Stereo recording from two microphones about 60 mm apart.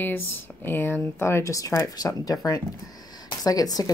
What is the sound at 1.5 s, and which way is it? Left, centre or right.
Speech, left.